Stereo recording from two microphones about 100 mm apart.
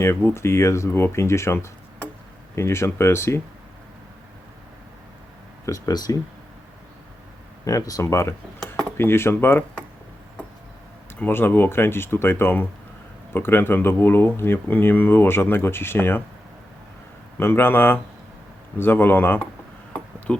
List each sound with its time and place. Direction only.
0.0 s speech: 25° left (ahead or behind)
2.6 s speech: 25° left (ahead or behind)
5.6 s speech: 35° left (ahead or behind)
7.6 s speech: 35° left (ahead or behind)
8.6 s cutlery: 5° left (ahead or behind)
9.0 s speech: 25° left (ahead or behind)
11.2 s speech: 20° left (ahead or behind)
17.4 s speech: 20° left (ahead or behind)
19.9 s a sound: 10° left (ahead or behind)